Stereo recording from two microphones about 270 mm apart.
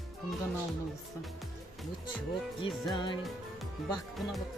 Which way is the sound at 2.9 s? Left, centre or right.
Centre.